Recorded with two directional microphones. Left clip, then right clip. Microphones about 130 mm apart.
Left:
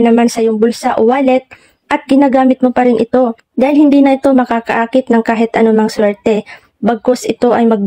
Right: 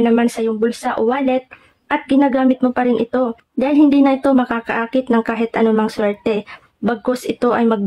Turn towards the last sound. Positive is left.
turn(degrees=30)  # may be behind; listen again after turning